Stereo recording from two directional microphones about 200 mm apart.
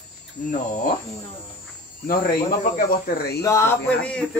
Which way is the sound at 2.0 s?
45° left (ahead or behind).